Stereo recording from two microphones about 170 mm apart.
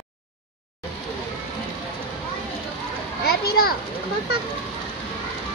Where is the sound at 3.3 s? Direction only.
65° left (ahead or behind).